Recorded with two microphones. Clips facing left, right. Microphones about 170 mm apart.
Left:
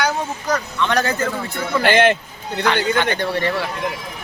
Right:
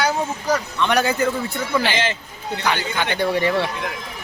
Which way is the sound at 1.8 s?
55° left (ahead or behind).